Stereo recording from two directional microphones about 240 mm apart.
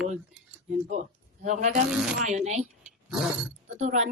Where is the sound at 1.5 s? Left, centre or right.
Right.